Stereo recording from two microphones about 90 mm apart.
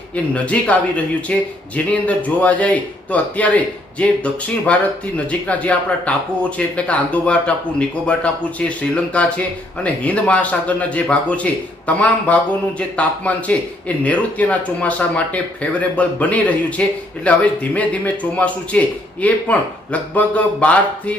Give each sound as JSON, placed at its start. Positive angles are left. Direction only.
{"t": 0.3, "sound": "speech", "side_deg": 15}